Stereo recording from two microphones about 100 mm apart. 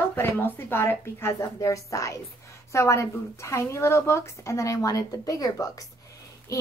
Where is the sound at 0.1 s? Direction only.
20° left (ahead or behind).